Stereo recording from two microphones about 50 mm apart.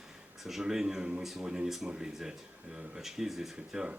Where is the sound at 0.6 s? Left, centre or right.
Centre.